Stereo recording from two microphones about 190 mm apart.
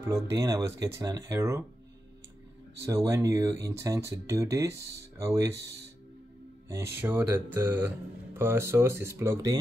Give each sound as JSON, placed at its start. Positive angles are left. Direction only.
{"t": 0.0, "sound": "speech", "side_deg": -15}
{"t": 2.9, "sound": "speech", "side_deg": -15}
{"t": 6.7, "sound": "speech", "side_deg": -10}